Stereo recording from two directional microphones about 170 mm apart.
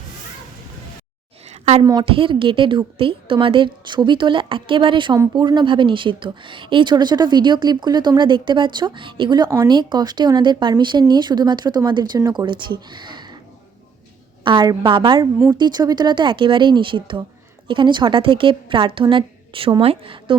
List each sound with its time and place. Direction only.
1.8 s a woman's voice: 25° right (ahead or behind)
14.4 s a woman's voice: 25° right (ahead or behind)